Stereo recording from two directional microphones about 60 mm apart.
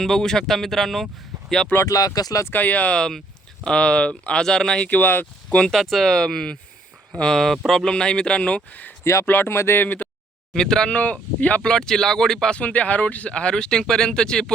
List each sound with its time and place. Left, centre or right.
0.0 s speech: centre
1.9 s speech: left
2.5 s speech: left
4.9 s speech: left
5.5 s speech: centre
9.2 s speech: left
10.5 s speech: centre
10.9 s speech: left
11.6 s speech: centre
12.5 s speech: left